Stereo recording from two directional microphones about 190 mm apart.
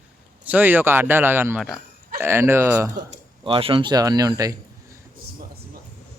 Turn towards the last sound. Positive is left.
turn(degrees=-20)  # may be behind; listen again after turning